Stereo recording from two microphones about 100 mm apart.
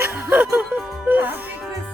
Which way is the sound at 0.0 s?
20° right (ahead or behind).